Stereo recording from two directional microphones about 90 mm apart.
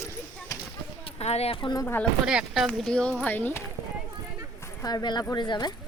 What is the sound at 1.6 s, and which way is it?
Speech, 70° left (ahead or behind).